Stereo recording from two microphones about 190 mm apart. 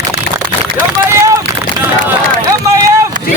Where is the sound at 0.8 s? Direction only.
15° right (ahead or behind).